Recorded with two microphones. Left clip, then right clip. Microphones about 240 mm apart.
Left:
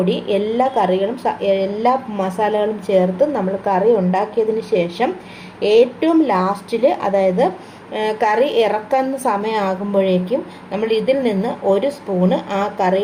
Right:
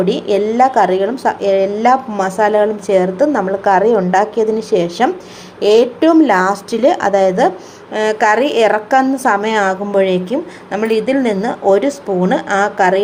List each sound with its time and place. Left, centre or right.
0.0 s a woman's voice: right